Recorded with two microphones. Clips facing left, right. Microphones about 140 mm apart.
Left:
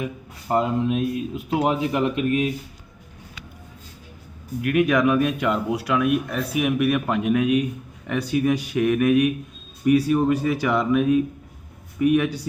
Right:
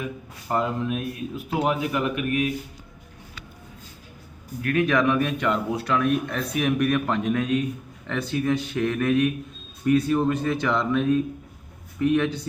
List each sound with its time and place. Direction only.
0.0 s speech: 20° left (ahead or behind)
4.6 s speech: 15° left (ahead or behind)